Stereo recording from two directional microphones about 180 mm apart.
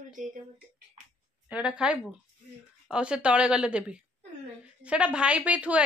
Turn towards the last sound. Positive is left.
turn(degrees=-5)  # may be behind; listen again after turning